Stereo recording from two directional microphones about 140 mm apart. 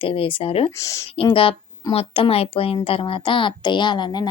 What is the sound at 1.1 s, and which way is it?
A woman's voice, 40° left (ahead or behind).